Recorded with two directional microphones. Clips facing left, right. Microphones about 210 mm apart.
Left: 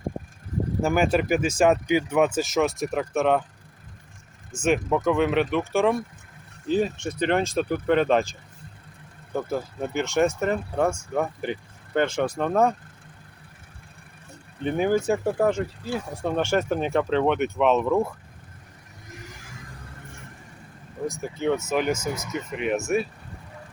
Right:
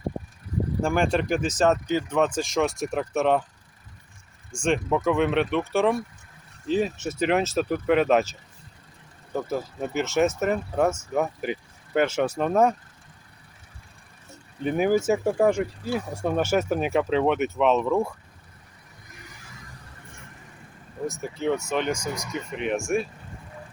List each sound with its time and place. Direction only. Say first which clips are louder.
0.8 s speech: left 2 dB; 5° left (ahead or behind)
4.5 s speech: left 1 dB; 5° left (ahead or behind)
14.6 s speech: right 1 dB; 5° right (ahead or behind)
21.1 s speech: left 1 dB; centre (ahead or behind)